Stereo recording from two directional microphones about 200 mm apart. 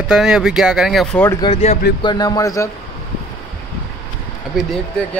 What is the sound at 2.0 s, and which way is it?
Speech, 20° left (ahead or behind).